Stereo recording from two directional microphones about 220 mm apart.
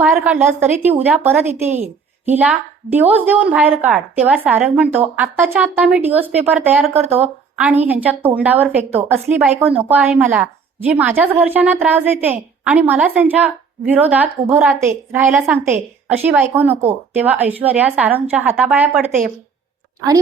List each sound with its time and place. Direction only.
0.0 s a woman's voice: 5° right (ahead or behind)